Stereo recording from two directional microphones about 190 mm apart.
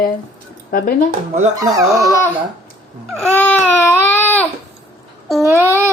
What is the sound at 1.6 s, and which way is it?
Speech, 20° right (ahead or behind).